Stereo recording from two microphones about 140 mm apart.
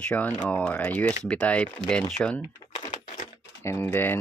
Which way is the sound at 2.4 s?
35° left (ahead or behind).